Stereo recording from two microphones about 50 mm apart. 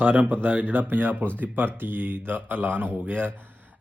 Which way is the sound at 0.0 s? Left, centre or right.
Right.